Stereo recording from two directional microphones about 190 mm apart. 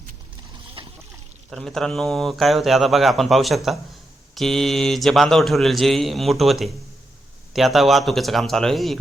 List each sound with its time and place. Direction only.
0.8 s splash: 25° right (ahead or behind)
1.5 s speech: centre (ahead or behind)